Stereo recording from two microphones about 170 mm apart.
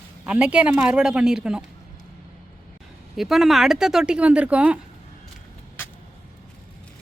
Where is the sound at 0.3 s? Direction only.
5° right (ahead or behind).